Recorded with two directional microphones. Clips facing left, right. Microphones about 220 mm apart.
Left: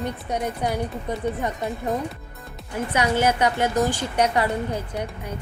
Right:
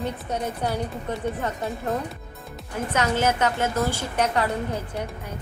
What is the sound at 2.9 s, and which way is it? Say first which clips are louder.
A woman's voice: left 2 dB; 10° left (ahead or behind).